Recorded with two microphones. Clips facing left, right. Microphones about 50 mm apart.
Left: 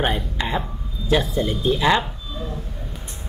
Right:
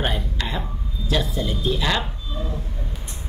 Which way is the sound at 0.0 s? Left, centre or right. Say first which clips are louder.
Left 3 dB; centre.